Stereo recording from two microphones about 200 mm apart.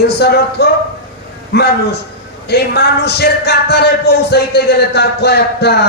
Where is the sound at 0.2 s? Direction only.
55° left (ahead or behind).